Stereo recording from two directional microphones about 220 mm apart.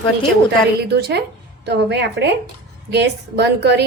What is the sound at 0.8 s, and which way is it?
A woman's voice, 50° right (ahead or behind).